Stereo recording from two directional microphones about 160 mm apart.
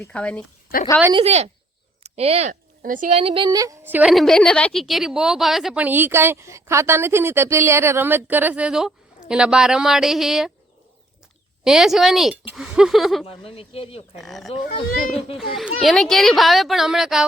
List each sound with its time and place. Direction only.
0.0 s speech: 5° left (ahead or behind)
1.1 s speech: 40° right (ahead or behind)
2.8 s a woman's voice: 60° right (ahead or behind)
3.1 s a woman's voice: 35° right (ahead or behind); by 4.1 s 10° right (ahead or behind)
4.1 s a woman's voice: centre (ahead or behind)
11.6 s a child's voice: centre (ahead or behind)
13.2 s speech: 35° left (ahead or behind)
14.2 s a child's voice: centre (ahead or behind)